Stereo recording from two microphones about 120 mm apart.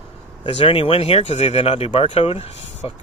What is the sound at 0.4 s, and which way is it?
Speech, 45° left (ahead or behind).